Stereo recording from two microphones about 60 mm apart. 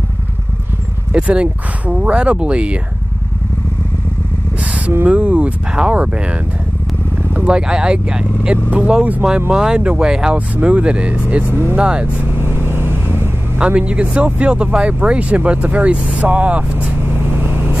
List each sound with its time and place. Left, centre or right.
1.1 s speech: centre
5.0 s speech: right
12.4 s vehicle: right
13.6 s speech: centre